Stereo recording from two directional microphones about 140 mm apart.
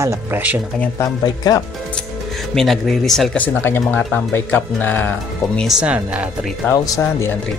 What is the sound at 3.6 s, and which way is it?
Speech, 15° left (ahead or behind).